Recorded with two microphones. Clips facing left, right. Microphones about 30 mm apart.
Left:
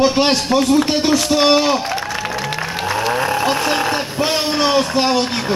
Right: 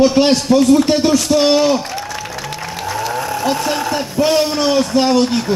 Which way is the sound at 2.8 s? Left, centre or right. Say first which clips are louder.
Left 2 dB; left.